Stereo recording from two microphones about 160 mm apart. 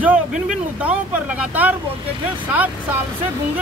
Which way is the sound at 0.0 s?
5° right (ahead or behind).